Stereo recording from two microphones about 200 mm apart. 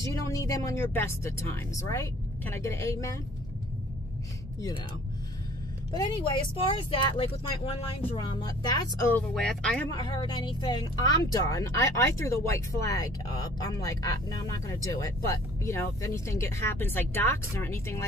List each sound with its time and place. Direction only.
0.0 s speech: 15° left (ahead or behind)
5.9 s speech: 25° left (ahead or behind)
9.3 s speech: 5° left (ahead or behind)
9.8 s speech: 20° left (ahead or behind)